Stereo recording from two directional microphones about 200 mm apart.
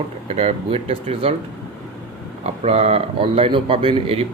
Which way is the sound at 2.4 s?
30° right (ahead or behind).